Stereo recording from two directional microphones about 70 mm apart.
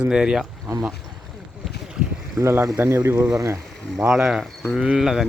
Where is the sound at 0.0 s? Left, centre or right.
Centre.